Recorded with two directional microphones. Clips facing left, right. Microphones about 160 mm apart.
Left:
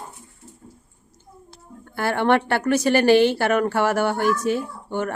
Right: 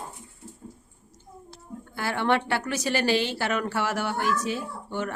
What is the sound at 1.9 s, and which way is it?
Speech, 55° left (ahead or behind).